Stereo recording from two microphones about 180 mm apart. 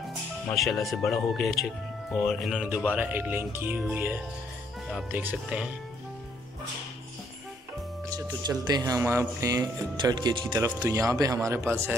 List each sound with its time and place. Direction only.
0.6 s speech: centre (ahead or behind)
8.1 s speech: 25° right (ahead or behind)